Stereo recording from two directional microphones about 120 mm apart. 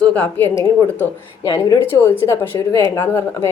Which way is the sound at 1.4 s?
30° left (ahead or behind).